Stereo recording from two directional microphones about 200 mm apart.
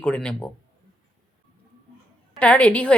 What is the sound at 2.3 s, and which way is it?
Speech, 5° left (ahead or behind).